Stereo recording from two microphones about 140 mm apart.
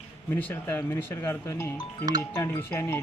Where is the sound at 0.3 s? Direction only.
15° left (ahead or behind).